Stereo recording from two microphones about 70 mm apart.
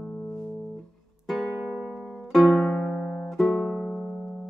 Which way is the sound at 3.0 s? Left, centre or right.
Left.